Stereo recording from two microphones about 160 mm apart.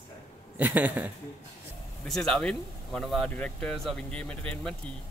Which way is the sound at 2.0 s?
5° left (ahead or behind).